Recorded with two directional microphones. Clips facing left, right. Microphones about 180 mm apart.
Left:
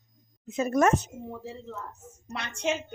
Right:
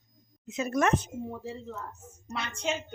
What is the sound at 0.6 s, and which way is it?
Speech, 40° left (ahead or behind).